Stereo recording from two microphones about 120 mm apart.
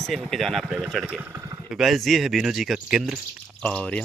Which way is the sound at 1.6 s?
Centre (ahead or behind).